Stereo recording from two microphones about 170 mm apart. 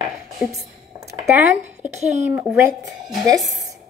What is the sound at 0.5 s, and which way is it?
Speech, 20° right (ahead or behind).